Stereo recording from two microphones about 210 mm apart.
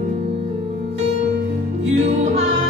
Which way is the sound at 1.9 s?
30° right (ahead or behind).